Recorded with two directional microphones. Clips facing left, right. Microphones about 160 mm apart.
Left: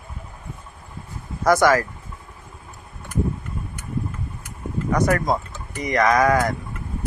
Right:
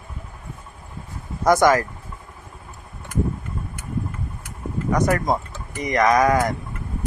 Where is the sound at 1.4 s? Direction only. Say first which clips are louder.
Right 1 dB; 20° right (ahead or behind).